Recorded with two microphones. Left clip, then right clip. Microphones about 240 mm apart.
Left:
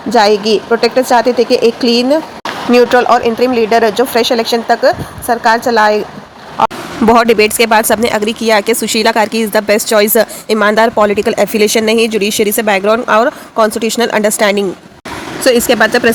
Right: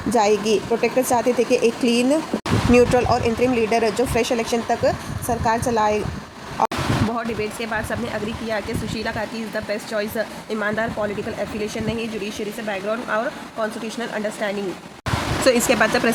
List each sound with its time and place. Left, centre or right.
0.1 s speech: centre
1.5 s speech: left
2.7 s speech: centre
7.1 s speech: left
15.4 s speech: left